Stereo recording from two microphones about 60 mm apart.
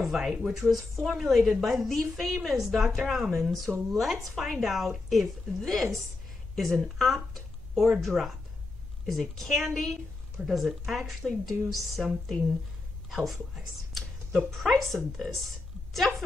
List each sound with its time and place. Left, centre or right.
0.0 s a woman's voice: centre